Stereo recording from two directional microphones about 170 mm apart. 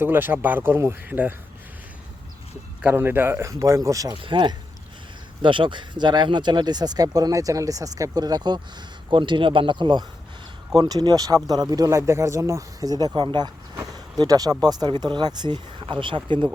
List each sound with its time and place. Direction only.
0.0 s speech: 10° right (ahead or behind)
2.8 s speech: 10° right (ahead or behind)
13.7 s a sound: 20° right (ahead or behind)
14.6 s speech: 25° right (ahead or behind)